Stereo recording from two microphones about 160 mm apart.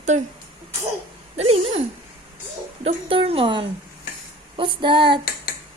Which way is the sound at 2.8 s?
35° right (ahead or behind).